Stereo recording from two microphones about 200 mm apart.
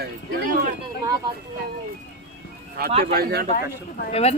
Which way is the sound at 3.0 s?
50° right (ahead or behind).